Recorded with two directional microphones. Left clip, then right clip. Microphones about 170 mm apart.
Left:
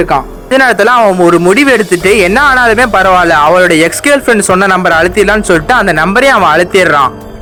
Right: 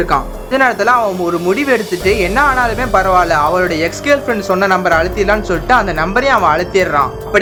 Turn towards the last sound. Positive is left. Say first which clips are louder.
# left 6 dB
turn(degrees=50)  # may be behind; listen again after turning